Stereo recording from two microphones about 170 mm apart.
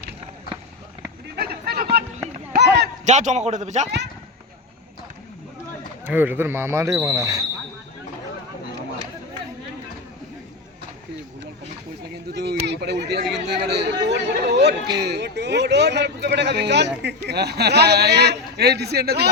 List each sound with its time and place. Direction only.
1.4 s a sound: 65° right (ahead or behind)
3.0 s a man's voice: 45° right (ahead or behind)
6.1 s speech: 10° right (ahead or behind)
12.3 s a sound: 75° right (ahead or behind)
13.3 s chatter: 80° right
15.0 s speech: 85° right